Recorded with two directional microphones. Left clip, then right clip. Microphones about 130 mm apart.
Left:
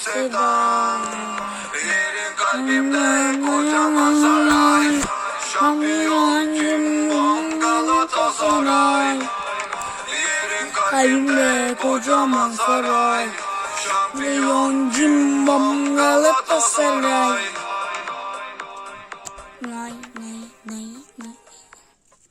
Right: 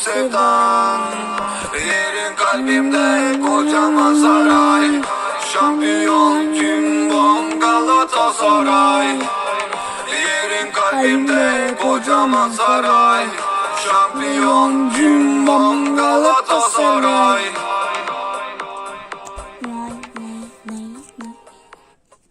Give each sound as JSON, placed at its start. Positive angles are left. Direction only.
{"t": 0.0, "sound": "music", "side_deg": -30}